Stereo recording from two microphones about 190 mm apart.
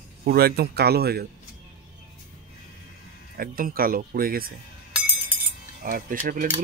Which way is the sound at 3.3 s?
50° right (ahead or behind).